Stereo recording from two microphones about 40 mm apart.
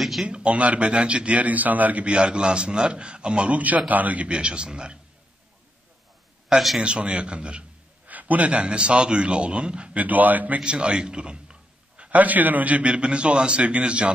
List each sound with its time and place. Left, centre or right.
0.2 s a man's voice: right
2.0 s a man's voice: right
3.5 s a man's voice: right
4.3 s a man's voice: right
6.5 s a man's voice: centre
6.8 s a man's voice: right
8.1 s a man's voice: right
8.6 s a man's voice: right
9.9 s a man's voice: right
10.6 s a man's voice: right
12.0 s a man's voice: right
12.9 s a man's voice: right